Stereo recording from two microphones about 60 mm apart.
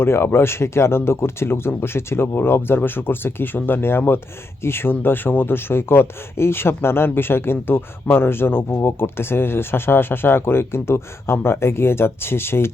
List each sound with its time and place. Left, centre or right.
0.0 s speech: left